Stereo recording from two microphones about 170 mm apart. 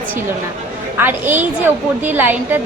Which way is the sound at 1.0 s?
10° right (ahead or behind).